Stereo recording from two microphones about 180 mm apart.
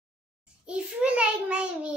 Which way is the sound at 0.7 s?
5° right (ahead or behind).